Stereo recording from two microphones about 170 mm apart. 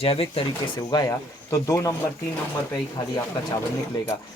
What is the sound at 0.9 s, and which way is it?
Speech, 20° left (ahead or behind).